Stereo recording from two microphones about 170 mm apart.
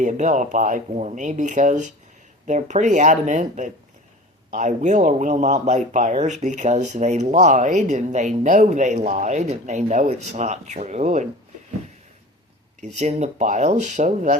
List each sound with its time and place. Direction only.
0.0 s speech: 45° right (ahead or behind)
12.8 s speech: 45° right (ahead or behind)